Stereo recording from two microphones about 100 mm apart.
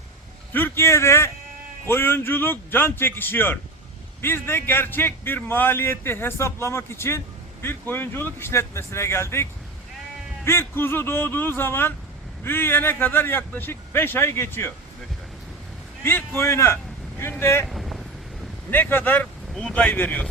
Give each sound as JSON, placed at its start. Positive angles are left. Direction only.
{"t": 0.5, "sound": "a man's voice", "side_deg": 25}
{"t": 16.0, "sound": "a man's voice", "side_deg": 25}
{"t": 17.7, "sound": "vehicle", "side_deg": 0}
{"t": 18.7, "sound": "speech", "side_deg": 20}